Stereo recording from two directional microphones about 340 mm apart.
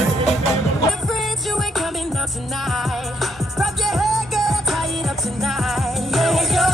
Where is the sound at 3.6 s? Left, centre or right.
Centre.